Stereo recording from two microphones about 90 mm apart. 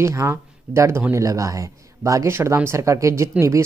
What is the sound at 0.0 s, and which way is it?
Speech, 35° right (ahead or behind).